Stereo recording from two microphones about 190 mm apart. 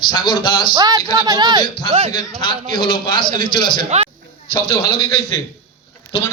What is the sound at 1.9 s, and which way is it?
Speech, 35° right (ahead or behind).